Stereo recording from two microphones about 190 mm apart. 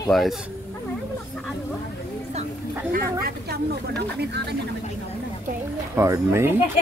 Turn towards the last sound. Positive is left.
turn(degrees=-15)  # may be behind; listen again after turning